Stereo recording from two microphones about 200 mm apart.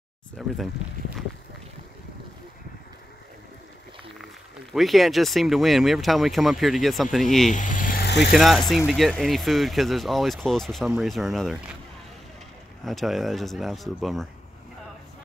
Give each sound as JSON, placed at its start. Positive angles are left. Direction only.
{"t": 0.4, "sound": "speech", "side_deg": 0}
{"t": 4.7, "sound": "speech", "side_deg": 0}
{"t": 7.5, "sound": "vehicle", "side_deg": 40}
{"t": 8.3, "sound": "speech", "side_deg": 0}
{"t": 12.8, "sound": "speech", "side_deg": 0}